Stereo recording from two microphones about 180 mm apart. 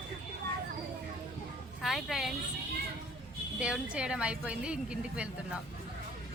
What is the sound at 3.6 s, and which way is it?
A woman's voice, 5° right (ahead or behind).